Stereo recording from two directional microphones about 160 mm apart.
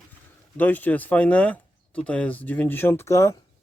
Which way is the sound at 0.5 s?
10° left (ahead or behind).